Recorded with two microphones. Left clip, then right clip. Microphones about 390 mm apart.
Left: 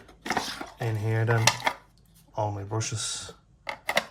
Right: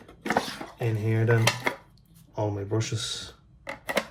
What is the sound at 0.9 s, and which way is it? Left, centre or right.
Speech, centre.